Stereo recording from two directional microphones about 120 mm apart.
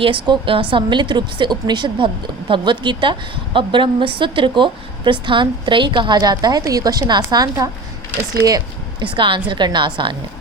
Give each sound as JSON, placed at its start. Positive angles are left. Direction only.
{"t": 0.0, "sound": "a woman's voice", "side_deg": -45}
{"t": 9.1, "sound": "a woman's voice", "side_deg": -45}